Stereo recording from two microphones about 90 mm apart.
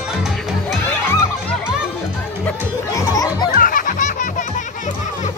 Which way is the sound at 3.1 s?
45° left (ahead or behind).